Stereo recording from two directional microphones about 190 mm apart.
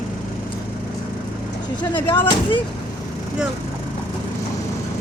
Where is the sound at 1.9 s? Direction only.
25° left (ahead or behind).